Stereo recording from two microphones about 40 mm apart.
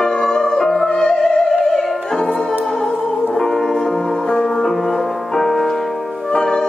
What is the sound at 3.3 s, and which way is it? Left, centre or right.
Music, centre.